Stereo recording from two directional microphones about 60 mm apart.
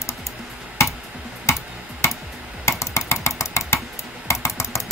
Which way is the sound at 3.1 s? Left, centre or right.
Left.